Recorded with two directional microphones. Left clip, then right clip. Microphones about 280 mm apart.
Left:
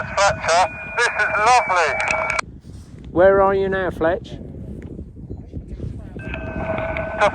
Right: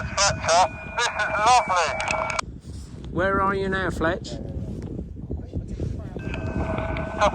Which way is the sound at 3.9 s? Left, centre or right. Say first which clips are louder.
Left 7 dB; centre.